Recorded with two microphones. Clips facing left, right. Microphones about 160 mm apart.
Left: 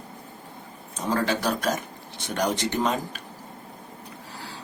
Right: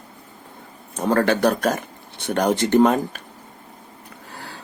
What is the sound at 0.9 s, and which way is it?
Speech, 55° right (ahead or behind).